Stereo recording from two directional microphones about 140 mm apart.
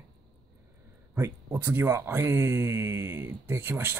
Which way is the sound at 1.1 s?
15° right (ahead or behind).